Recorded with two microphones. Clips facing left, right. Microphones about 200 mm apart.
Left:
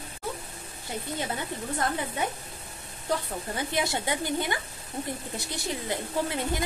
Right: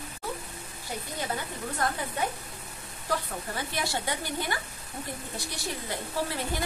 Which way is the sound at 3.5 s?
20° left (ahead or behind).